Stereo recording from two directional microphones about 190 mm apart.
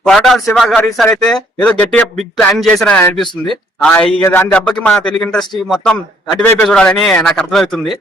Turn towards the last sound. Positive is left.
turn(degrees=0)  # may be behind; listen again after turning